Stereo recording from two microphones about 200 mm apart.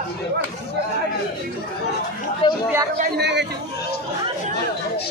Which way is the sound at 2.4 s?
25° left (ahead or behind).